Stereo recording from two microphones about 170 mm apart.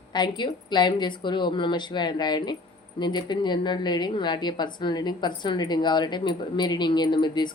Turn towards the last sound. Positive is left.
turn(degrees=25)  # may be behind; listen again after turning